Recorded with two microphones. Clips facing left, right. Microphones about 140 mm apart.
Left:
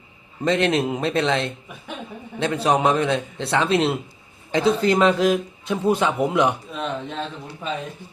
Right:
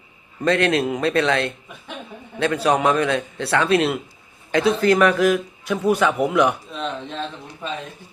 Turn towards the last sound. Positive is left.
turn(degrees=5)  # may be behind; listen again after turning